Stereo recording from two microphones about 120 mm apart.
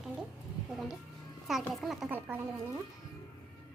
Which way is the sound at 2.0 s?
15° right (ahead or behind).